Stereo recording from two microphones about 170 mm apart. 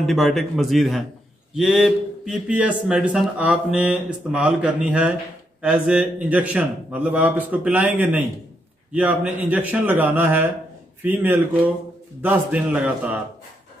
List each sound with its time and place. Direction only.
0.0 s a man's voice: centre (ahead or behind)